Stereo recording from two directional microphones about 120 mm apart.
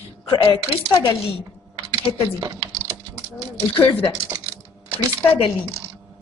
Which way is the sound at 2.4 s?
25° right (ahead or behind).